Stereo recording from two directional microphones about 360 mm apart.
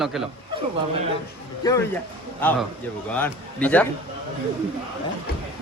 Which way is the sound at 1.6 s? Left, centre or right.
Centre.